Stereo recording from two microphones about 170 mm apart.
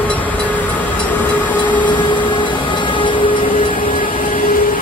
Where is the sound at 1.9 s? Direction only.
25° left (ahead or behind).